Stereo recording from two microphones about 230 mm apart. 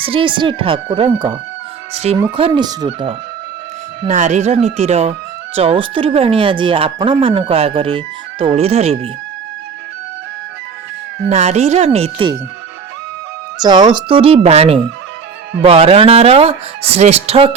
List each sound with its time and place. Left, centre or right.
0.0 s speech: right
2.3 s speech: right
4.0 s speech: right
11.3 s speech: right
13.6 s speech: centre